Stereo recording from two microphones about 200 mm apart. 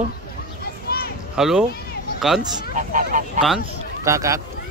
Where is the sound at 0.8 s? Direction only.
50° left (ahead or behind).